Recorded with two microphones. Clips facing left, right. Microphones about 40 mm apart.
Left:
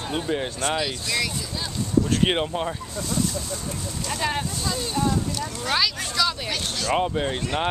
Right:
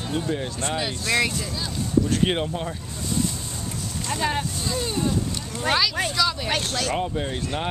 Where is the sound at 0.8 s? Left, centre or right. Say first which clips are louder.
Right 2 dB; centre.